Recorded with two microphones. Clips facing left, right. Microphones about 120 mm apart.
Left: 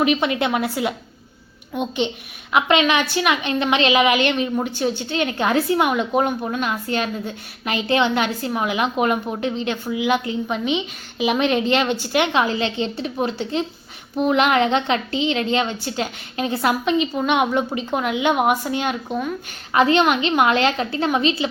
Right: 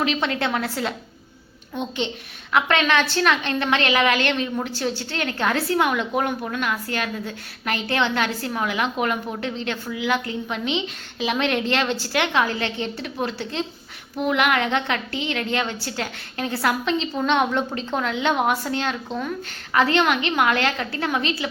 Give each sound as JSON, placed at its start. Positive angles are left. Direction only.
{"t": 0.0, "sound": "a woman's voice", "side_deg": 15}